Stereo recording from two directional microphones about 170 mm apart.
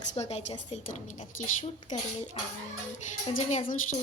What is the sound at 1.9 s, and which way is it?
Speech, 45° left (ahead or behind).